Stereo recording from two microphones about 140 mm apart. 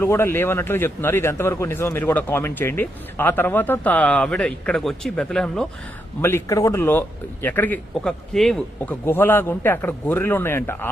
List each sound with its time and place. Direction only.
0.0 s a man's voice: 15° left (ahead or behind)
6.2 s a man's voice: 20° left (ahead or behind); by 9.0 s 5° left (ahead or behind)
9.0 s a man's voice: 15° left (ahead or behind)